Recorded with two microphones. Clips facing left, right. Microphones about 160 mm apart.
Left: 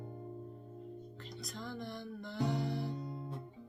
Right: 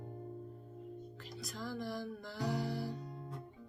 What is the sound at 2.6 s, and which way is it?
Music, 5° right (ahead or behind).